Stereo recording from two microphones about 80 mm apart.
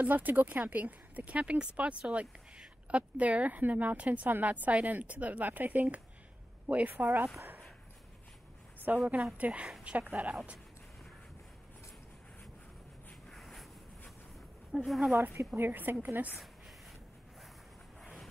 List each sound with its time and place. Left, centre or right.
0.0 s speech: right
8.9 s a woman's voice: centre
13.3 s a sound: centre
14.9 s speech: centre
15.3 s speech: right
18.0 s a sound: centre